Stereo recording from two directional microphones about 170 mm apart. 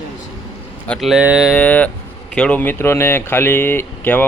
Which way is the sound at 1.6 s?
10° left (ahead or behind).